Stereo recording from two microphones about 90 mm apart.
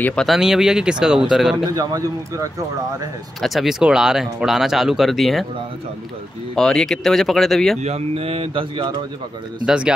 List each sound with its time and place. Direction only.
0.0 s speech: 10° left (ahead or behind)
0.3 s speech: 5° right (ahead or behind)
1.7 s speech: 40° right (ahead or behind)
3.3 s speech: centre (ahead or behind)
6.5 s speech: 5° left (ahead or behind)
8.1 s speech: 90° right
9.7 s speech: 10° right (ahead or behind)